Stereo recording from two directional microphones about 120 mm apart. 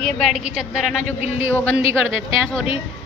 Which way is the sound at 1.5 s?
15° left (ahead or behind).